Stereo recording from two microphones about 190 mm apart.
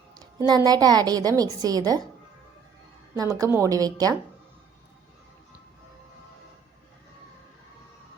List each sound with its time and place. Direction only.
0.4 s a child's voice: 20° right (ahead or behind)
3.2 s a child's voice: 20° right (ahead or behind)